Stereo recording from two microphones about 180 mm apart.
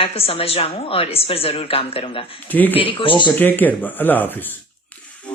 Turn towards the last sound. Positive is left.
turn(degrees=10)  # may be behind; listen again after turning